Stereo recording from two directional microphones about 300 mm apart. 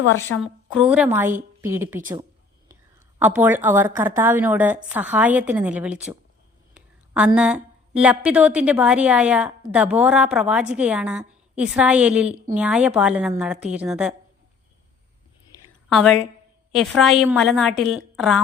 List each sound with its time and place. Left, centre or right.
0.4 s a woman's voice: centre
3.2 s a woman's voice: centre
15.9 s a woman's voice: centre